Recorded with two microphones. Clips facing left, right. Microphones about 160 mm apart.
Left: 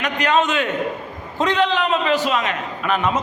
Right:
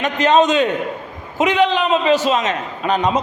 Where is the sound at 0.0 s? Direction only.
20° right (ahead or behind).